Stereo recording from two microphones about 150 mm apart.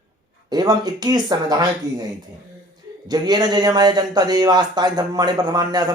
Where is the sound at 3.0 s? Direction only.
25° right (ahead or behind).